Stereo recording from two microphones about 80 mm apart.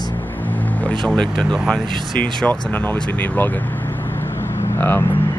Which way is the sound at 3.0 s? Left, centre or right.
Centre.